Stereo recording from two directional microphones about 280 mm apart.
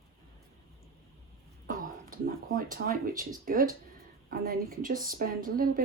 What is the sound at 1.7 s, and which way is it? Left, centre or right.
Speech, right.